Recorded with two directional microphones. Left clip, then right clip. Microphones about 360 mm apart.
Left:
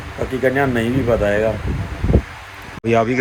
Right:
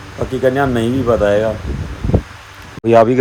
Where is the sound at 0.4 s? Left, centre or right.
Centre.